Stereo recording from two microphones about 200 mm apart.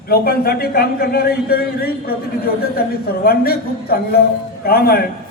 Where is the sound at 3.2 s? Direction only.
50° left (ahead or behind).